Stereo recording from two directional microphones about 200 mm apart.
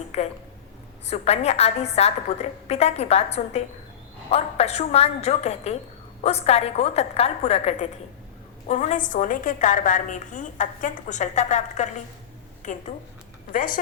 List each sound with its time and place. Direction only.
0.1 s a woman's voice: 35° left (ahead or behind)